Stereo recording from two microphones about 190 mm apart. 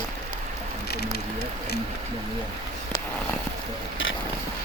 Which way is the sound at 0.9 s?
60° left (ahead or behind).